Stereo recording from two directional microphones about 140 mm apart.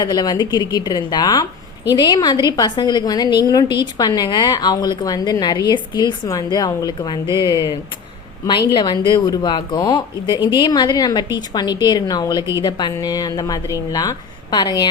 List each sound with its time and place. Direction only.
0.0 s a woman's voice: 30° left (ahead or behind)